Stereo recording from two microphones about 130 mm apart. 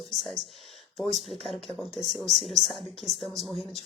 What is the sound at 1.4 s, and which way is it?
Speech, centre (ahead or behind).